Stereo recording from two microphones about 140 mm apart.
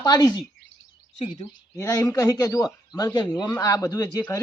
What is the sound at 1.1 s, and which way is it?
Speech, 55° left (ahead or behind).